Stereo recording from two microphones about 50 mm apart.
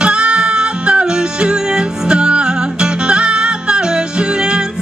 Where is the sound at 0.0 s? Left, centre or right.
Right.